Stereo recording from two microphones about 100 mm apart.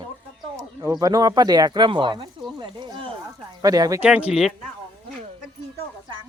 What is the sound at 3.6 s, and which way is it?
Speech, 35° right (ahead or behind).